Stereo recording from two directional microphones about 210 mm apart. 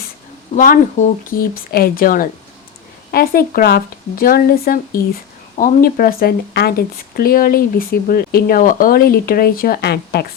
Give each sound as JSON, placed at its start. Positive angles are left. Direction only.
{"t": 0.5, "sound": "speech", "side_deg": 40}